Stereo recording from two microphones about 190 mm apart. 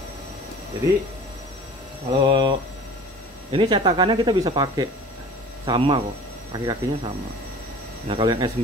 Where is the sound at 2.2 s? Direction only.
25° right (ahead or behind).